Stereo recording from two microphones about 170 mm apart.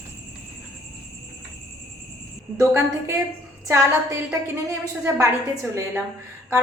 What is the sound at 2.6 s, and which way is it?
Speech, 15° right (ahead or behind).